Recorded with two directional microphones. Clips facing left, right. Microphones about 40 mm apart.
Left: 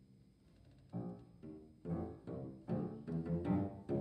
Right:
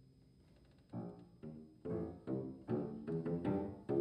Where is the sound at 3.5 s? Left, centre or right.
Centre.